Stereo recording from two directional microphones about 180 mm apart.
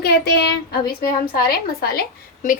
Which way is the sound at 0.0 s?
65° left (ahead or behind).